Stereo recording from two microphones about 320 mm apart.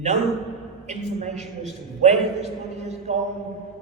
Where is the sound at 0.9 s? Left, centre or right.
Right.